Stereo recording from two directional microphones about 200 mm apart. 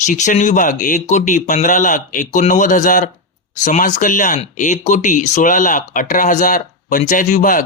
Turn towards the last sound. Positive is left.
turn(degrees=40)  # may be behind; listen again after turning